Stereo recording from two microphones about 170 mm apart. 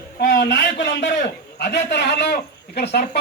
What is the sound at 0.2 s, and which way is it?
A man's voice, 90° left.